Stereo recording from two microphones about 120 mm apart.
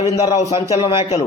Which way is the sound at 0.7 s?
60° left (ahead or behind).